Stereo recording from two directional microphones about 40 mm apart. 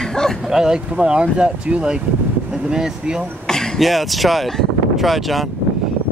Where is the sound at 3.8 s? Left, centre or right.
Centre.